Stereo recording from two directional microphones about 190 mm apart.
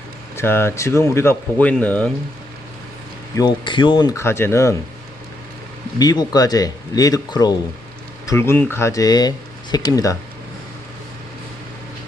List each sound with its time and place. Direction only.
0.3 s speech: 10° left (ahead or behind)
3.3 s speech: 25° left (ahead or behind)
6.0 s speech: 20° left (ahead or behind)